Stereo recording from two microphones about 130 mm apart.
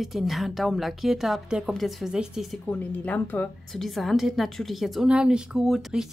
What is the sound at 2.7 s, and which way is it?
Speech, 10° left (ahead or behind).